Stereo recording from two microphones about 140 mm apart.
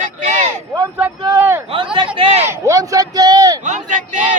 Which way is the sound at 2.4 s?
20° right (ahead or behind).